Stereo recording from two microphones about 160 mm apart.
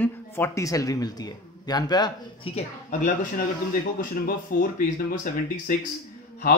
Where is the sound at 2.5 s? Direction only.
50° left (ahead or behind).